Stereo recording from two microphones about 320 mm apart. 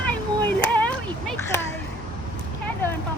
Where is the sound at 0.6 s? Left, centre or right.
Centre.